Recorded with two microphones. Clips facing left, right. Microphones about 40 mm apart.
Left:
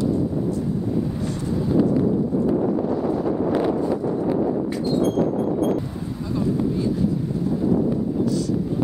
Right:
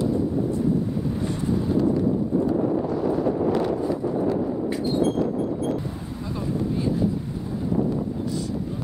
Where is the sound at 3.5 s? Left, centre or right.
Centre.